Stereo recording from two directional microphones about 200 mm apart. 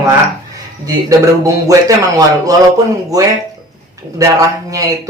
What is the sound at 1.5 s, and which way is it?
Speech, 15° right (ahead or behind).